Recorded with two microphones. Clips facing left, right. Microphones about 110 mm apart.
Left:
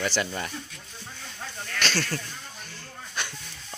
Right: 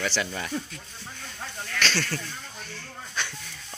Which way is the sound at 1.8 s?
10° left (ahead or behind).